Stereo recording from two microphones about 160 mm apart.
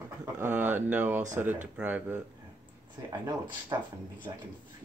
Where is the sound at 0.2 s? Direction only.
15° right (ahead or behind).